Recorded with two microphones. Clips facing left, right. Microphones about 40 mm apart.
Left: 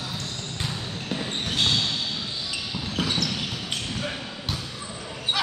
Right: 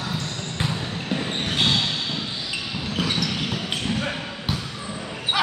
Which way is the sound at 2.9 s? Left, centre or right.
Centre.